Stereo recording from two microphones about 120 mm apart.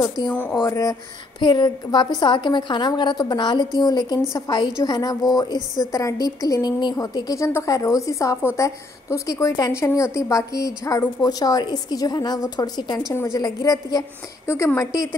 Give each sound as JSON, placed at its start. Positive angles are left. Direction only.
{"t": 0.0, "sound": "a woman's voice", "side_deg": 30}
{"t": 0.3, "sound": "speech", "side_deg": 10}
{"t": 0.7, "sound": "a woman's voice", "side_deg": 30}
{"t": 14.5, "sound": "speech", "side_deg": 20}